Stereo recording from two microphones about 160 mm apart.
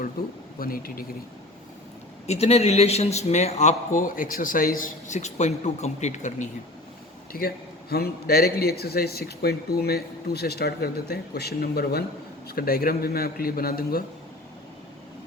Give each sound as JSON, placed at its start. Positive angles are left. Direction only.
{"t": 0.6, "sound": "a man's voice", "side_deg": 65}
{"t": 2.2, "sound": "a man's voice", "side_deg": 40}
{"t": 7.3, "sound": "speech", "side_deg": 70}